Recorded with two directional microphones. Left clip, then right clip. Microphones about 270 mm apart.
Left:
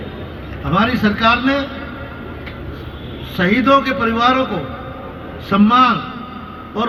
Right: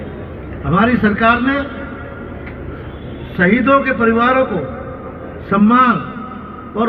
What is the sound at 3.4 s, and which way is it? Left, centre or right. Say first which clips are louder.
Speech: right 2 dB; left.